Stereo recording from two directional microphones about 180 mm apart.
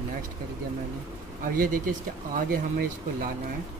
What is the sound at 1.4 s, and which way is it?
Speech, 50° right (ahead or behind).